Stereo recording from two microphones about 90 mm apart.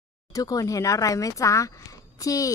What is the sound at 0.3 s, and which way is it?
Speech, 40° left (ahead or behind).